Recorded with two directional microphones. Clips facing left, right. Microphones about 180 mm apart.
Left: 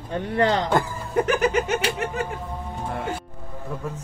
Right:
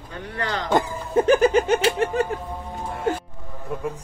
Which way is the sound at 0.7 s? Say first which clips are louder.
Right 2 dB; 25° right (ahead or behind).